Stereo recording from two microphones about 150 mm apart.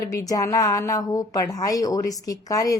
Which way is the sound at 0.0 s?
25° left (ahead or behind).